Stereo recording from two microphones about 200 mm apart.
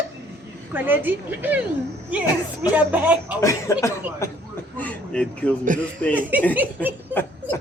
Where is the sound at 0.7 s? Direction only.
10° right (ahead or behind).